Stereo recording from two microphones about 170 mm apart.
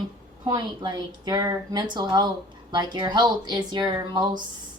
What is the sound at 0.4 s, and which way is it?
A woman's voice, 25° right (ahead or behind).